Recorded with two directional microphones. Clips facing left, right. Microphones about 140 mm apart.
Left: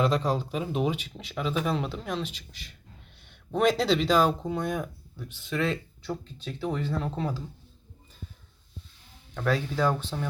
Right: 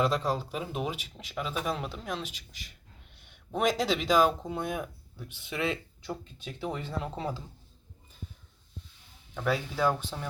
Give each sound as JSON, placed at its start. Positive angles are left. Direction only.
{"t": 0.0, "sound": "speech", "side_deg": 0}
{"t": 9.3, "sound": "speech", "side_deg": -10}